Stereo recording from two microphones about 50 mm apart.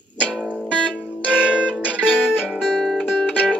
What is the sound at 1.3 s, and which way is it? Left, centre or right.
Music, right.